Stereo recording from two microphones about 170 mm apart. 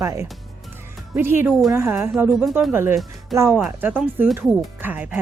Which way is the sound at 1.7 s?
15° right (ahead or behind).